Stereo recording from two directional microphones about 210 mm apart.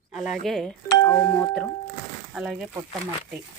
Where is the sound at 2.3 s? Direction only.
5° right (ahead or behind).